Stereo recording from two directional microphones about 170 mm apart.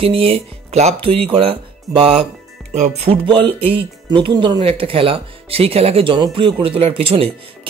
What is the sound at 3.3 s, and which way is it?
Speech, 35° right (ahead or behind).